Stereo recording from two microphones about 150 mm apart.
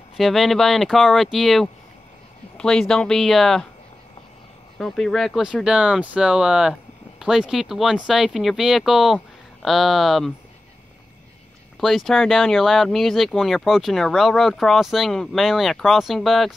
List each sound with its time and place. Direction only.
0.2 s speech: centre (ahead or behind)
4.7 s speech: centre (ahead or behind)
11.8 s speech: centre (ahead or behind)